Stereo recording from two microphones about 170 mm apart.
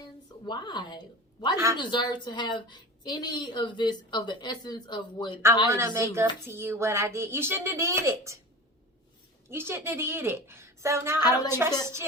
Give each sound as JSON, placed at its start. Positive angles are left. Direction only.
{"t": 0.4, "sound": "a woman's voice", "side_deg": 25}
{"t": 5.6, "sound": "a woman's voice", "side_deg": -15}
{"t": 9.5, "sound": "a woman's voice", "side_deg": -15}
{"t": 11.2, "sound": "a woman's voice", "side_deg": 25}